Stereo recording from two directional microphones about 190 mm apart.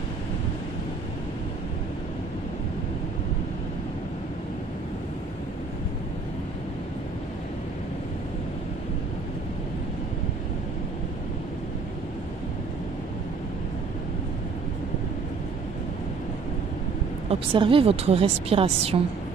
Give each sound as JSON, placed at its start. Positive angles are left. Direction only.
{"t": 17.3, "sound": "a woman's voice", "side_deg": -30}